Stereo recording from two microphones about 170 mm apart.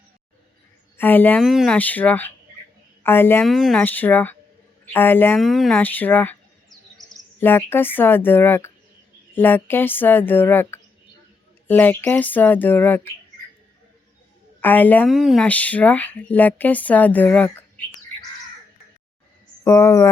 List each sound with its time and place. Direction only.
0.9 s speech: 10° left (ahead or behind)
1.4 s a woman's voice: centre (ahead or behind)
3.4 s speech: centre (ahead or behind)
5.4 s chirp: centre (ahead or behind)
7.3 s speech: 10° left (ahead or behind)
14.6 s speech: 10° left (ahead or behind)
15.1 s speech: centre (ahead or behind)
19.6 s speech: 15° left (ahead or behind)